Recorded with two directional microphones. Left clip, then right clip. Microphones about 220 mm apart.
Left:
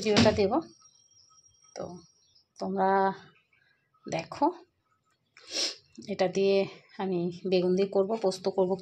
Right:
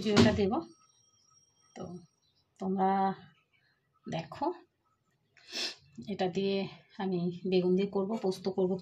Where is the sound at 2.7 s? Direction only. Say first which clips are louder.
Left 4 dB; 20° left (ahead or behind).